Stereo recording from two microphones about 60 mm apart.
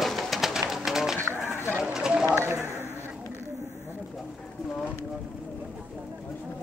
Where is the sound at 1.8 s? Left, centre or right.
Centre.